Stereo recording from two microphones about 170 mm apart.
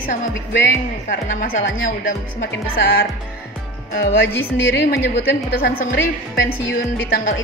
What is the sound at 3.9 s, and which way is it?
A woman's voice, 65° left (ahead or behind).